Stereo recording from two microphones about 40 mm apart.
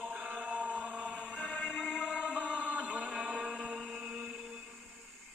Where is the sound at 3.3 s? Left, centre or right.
Centre.